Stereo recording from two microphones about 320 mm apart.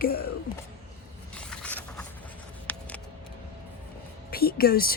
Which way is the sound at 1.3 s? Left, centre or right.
Centre.